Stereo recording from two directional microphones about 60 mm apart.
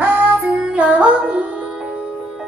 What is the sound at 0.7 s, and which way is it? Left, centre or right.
Music, centre.